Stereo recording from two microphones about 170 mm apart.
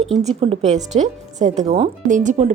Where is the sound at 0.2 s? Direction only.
40° right (ahead or behind).